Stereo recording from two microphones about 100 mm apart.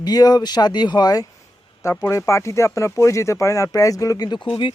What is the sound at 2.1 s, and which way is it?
Speech, 30° left (ahead or behind).